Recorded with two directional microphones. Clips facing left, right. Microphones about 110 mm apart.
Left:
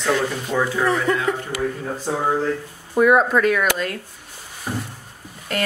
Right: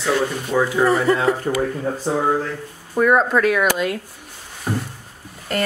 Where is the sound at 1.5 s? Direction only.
55° right (ahead or behind).